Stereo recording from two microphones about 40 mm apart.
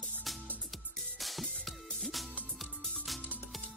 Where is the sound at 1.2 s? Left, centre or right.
Centre.